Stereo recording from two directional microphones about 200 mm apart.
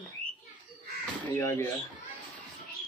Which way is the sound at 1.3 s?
15° left (ahead or behind).